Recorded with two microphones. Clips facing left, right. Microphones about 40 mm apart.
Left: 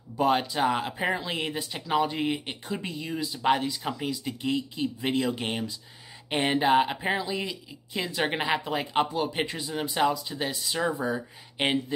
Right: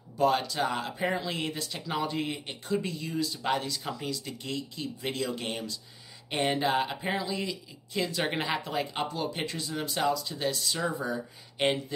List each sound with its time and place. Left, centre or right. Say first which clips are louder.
0.2 s speech: left 2 dB; left